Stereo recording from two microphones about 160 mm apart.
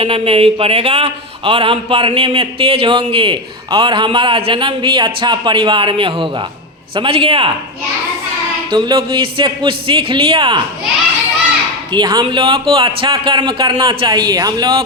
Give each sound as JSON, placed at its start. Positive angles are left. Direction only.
{"t": 0.0, "sound": "a man's voice", "side_deg": -35}
{"t": 8.7, "sound": "a man's voice", "side_deg": -30}
{"t": 11.9, "sound": "speech", "side_deg": -25}